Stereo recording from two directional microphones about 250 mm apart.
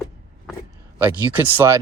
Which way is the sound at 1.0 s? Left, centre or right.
Centre.